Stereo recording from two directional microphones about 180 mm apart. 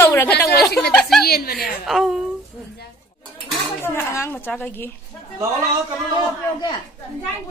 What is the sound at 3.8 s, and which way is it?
A woman's voice, 15° left (ahead or behind).